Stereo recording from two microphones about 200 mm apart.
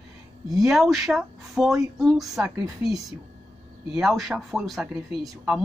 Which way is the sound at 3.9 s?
Centre (ahead or behind).